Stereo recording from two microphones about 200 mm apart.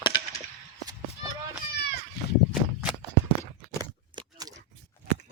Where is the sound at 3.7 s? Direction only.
20° right (ahead or behind).